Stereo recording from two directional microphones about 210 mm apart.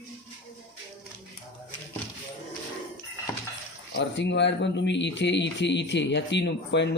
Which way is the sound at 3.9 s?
55° left (ahead or behind).